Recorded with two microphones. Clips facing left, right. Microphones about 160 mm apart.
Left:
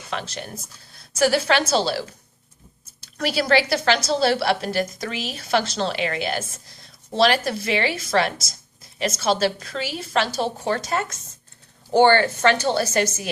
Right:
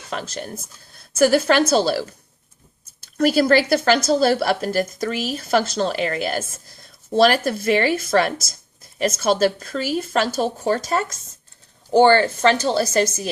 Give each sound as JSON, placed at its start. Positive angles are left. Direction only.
{"t": 0.1, "sound": "a woman's voice", "side_deg": -40}
{"t": 3.2, "sound": "a woman's voice", "side_deg": -50}